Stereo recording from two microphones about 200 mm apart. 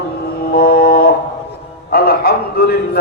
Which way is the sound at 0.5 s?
50° left (ahead or behind).